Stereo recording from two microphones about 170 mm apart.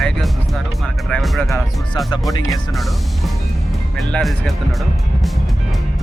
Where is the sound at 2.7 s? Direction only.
Centre (ahead or behind).